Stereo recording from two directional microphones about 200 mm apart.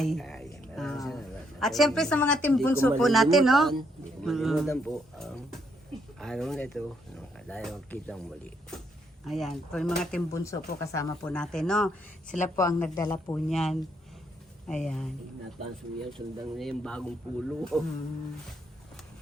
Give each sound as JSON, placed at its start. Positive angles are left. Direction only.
{"t": 0.0, "sound": "a sound", "side_deg": 0}
{"t": 3.0, "sound": "speech", "side_deg": 0}
{"t": 10.3, "sound": "speech", "side_deg": 15}
{"t": 12.5, "sound": "speech", "side_deg": 15}
{"t": 13.5, "sound": "speech", "side_deg": 0}
{"t": 16.6, "sound": "speech", "side_deg": 0}